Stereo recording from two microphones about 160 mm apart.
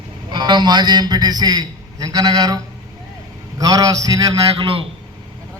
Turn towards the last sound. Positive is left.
turn(degrees=-35)  # may be behind; listen again after turning